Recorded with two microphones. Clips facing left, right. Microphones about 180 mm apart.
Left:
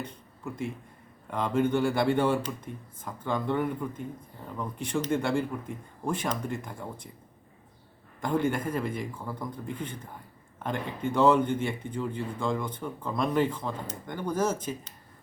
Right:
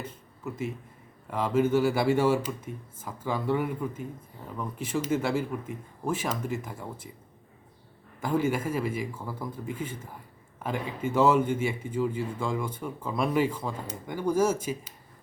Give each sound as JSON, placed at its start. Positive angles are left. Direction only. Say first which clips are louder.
{"t": 0.0, "sound": "a sound", "louder": "even", "side_deg": -5}
{"t": 1.3, "sound": "a man's voice", "louder": "right 2 dB", "side_deg": -5}
{"t": 8.2, "sound": "a man's voice", "louder": "right 1 dB", "side_deg": -5}